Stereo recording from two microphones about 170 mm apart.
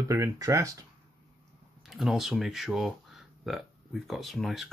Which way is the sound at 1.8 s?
5° right (ahead or behind).